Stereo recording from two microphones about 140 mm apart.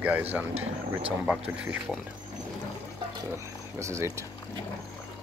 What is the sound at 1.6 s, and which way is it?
Speech, 10° right (ahead or behind).